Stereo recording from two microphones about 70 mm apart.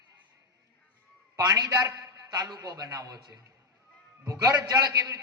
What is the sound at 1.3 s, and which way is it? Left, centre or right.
A man's voice, right.